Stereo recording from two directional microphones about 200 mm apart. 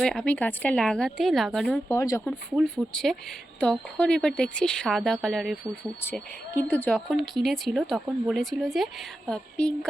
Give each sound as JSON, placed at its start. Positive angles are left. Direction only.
{"t": 0.0, "sound": "a woman's voice", "side_deg": 5}
{"t": 1.9, "sound": "a woman's voice", "side_deg": 15}
{"t": 2.5, "sound": "a woman's voice", "side_deg": 0}